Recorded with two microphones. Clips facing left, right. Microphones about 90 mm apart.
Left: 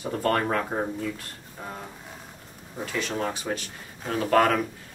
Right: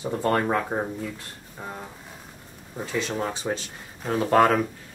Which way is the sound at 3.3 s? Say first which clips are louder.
Right 2 dB; 25° right (ahead or behind).